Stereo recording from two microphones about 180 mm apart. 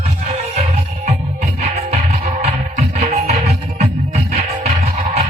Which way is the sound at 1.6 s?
40° right (ahead or behind).